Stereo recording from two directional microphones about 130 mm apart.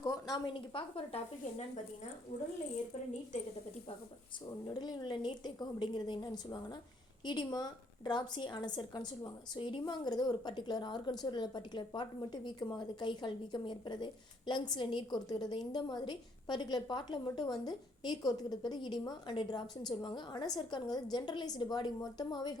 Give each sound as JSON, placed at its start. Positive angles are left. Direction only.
{"t": 0.0, "sound": "a woman's voice", "side_deg": 35}
{"t": 4.6, "sound": "a woman's voice", "side_deg": 35}